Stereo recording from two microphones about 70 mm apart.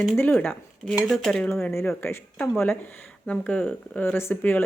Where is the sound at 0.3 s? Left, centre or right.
Left.